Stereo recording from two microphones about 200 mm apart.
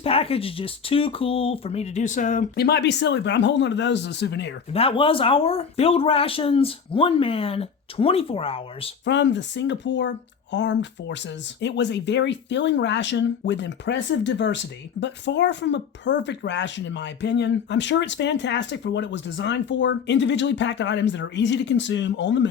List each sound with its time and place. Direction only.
0.0 s speech: 30° left (ahead or behind); by 4.5 s 60° left (ahead or behind)
4.7 s speech: 30° left (ahead or behind)
9.0 s speech: 60° left (ahead or behind)